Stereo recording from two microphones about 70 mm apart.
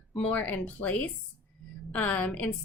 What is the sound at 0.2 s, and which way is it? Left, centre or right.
A woman's voice, left.